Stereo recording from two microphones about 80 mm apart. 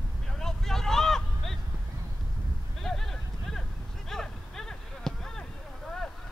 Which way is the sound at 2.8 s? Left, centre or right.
Centre.